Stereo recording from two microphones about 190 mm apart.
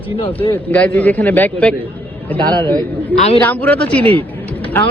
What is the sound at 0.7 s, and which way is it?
A man's voice, 10° left (ahead or behind).